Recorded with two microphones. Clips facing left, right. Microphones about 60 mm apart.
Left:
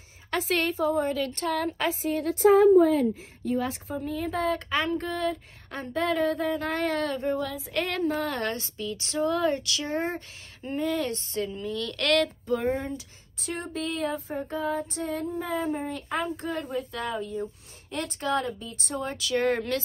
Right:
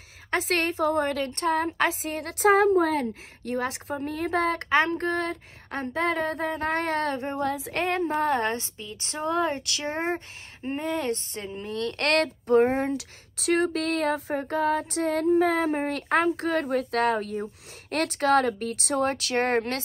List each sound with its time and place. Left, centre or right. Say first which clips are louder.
0.5 s speech: even; right
0.7 s speech: right 1 dB; right
1.2 s speech: right 3 dB; right
1.8 s speech: right 1 dB; right
7.7 s speech: left 1 dB; right
12.9 s speech: right 6 dB; right
18.9 s speech: right 3 dB; right